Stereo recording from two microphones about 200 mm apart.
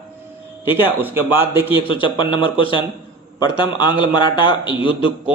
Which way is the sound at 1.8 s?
25° left (ahead or behind).